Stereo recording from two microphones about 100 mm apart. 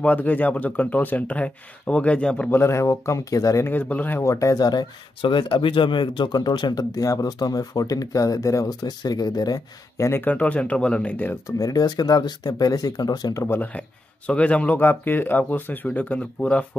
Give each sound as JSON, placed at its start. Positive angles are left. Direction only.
{"t": 0.0, "sound": "speech", "side_deg": 15}
{"t": 2.6, "sound": "speech", "side_deg": 30}
{"t": 3.6, "sound": "speech", "side_deg": 15}
{"t": 4.2, "sound": "speech", "side_deg": 30}
{"t": 10.2, "sound": "speech", "side_deg": 15}
{"t": 11.4, "sound": "speech", "side_deg": 35}
{"t": 13.4, "sound": "speech", "side_deg": 25}
{"t": 13.7, "sound": "speech", "side_deg": 10}